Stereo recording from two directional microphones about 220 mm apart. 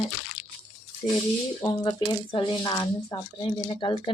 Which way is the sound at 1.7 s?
20° left (ahead or behind).